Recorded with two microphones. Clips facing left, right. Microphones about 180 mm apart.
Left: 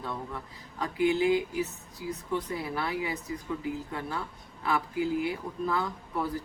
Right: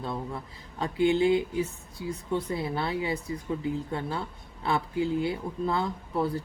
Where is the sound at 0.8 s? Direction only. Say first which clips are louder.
Right 2 dB; 30° right (ahead or behind).